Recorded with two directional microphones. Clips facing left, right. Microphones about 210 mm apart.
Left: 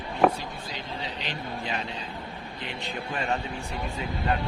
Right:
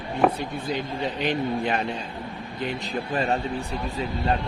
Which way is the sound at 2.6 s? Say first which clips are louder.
Right 6 dB; 40° right (ahead or behind).